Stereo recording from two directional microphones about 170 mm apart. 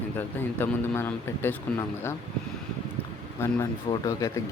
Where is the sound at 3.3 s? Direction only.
15° left (ahead or behind).